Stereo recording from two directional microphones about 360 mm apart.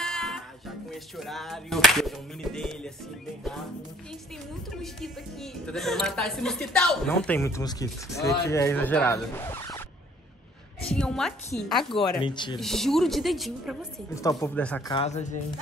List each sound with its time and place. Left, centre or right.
0.0 s music: centre
4.6 s a woman's voice: centre
10.9 s a woman's voice: centre
12.2 s speech: centre
12.5 s a woman's voice: centre